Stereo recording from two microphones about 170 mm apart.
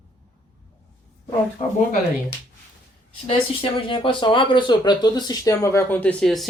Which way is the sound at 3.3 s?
30° left (ahead or behind).